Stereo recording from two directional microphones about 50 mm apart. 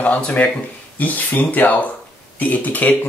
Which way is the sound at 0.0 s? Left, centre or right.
Left.